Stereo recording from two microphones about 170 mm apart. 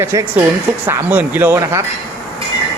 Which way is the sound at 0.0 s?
15° right (ahead or behind).